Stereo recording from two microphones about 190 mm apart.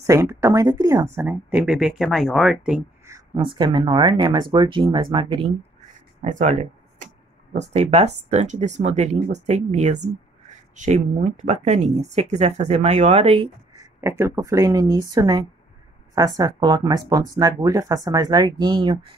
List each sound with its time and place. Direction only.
0.0 s speech: 15° right (ahead or behind)
3.1 s speech: 25° right (ahead or behind)
6.2 s speech: 40° right (ahead or behind)
14.0 s speech: 15° right (ahead or behind)